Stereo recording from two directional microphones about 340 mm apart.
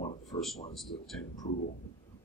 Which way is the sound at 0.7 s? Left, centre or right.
Centre.